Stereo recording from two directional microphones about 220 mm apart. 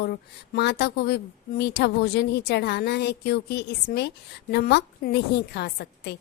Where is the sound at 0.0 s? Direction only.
45° left (ahead or behind).